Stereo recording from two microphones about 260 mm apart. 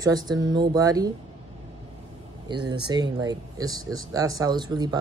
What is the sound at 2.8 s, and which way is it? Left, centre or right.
Speech, centre.